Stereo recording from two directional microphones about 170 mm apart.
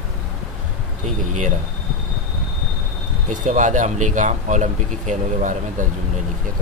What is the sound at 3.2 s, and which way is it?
Speech, 50° right (ahead or behind).